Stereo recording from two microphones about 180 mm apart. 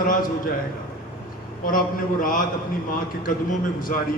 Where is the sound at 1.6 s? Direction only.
50° left (ahead or behind).